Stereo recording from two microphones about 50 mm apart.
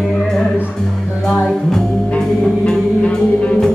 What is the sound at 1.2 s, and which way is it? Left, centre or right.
Music, centre.